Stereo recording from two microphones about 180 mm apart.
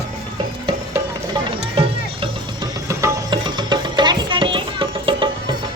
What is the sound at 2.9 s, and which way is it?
Music, 20° right (ahead or behind).